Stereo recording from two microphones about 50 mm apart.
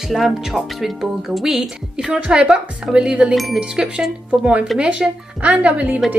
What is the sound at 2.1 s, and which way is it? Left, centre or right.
Speech, right.